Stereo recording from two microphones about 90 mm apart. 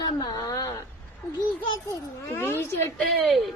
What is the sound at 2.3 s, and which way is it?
Speech, 25° left (ahead or behind).